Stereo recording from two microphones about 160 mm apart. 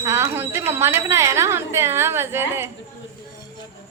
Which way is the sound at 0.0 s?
15° right (ahead or behind).